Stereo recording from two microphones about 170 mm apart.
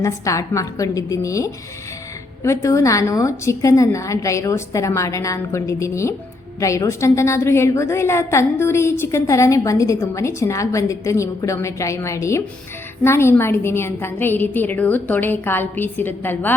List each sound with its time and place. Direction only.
0.0 s a woman's voice: 20° left (ahead or behind)